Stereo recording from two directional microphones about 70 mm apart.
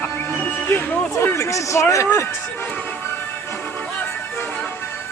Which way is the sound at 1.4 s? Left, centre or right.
Left.